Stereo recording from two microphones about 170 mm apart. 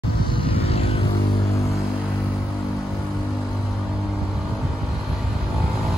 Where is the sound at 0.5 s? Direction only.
35° left (ahead or behind).